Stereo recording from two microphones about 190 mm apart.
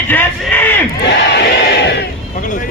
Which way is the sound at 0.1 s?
10° left (ahead or behind).